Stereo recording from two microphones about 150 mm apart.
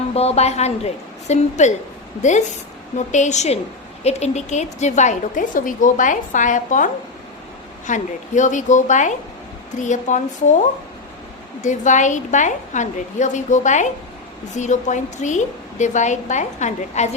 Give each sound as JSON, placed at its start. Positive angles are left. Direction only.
{"t": 0.1, "sound": "a woman's voice", "side_deg": 45}
{"t": 11.6, "sound": "a woman's voice", "side_deg": 55}